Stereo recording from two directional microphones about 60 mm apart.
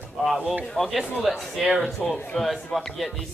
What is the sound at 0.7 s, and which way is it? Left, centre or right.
Speech, centre.